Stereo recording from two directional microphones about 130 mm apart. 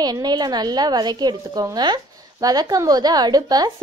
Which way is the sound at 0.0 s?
30° right (ahead or behind).